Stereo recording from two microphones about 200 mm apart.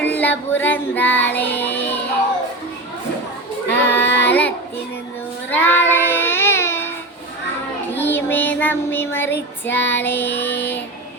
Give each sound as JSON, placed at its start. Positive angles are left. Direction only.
{"t": 0.0, "sound": "music", "side_deg": 10}
{"t": 0.6, "sound": "female singing", "side_deg": 10}
{"t": 3.7, "sound": "child singing", "side_deg": 10}
{"t": 4.0, "sound": "child singing", "side_deg": 60}
{"t": 4.3, "sound": "child singing", "side_deg": 10}
{"t": 7.9, "sound": "child singing", "side_deg": 10}
{"t": 9.6, "sound": "female singing", "side_deg": 10}